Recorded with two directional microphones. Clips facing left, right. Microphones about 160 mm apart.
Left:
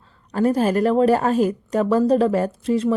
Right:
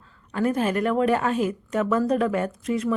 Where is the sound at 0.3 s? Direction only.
35° left (ahead or behind).